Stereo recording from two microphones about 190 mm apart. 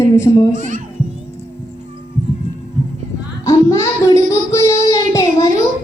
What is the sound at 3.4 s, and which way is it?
Child singing, 15° left (ahead or behind).